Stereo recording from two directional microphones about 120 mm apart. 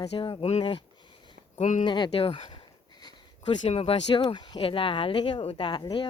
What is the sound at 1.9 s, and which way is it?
Speech, 40° left (ahead or behind).